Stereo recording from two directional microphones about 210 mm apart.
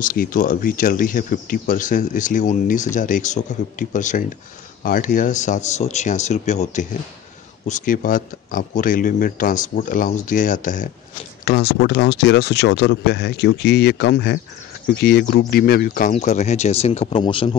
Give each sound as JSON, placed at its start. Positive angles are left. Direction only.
{"t": 0.0, "sound": "speech", "side_deg": 40}
{"t": 11.4, "sound": "speech", "side_deg": 50}